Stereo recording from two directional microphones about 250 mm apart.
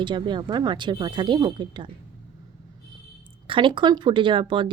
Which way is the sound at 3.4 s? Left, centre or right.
Centre.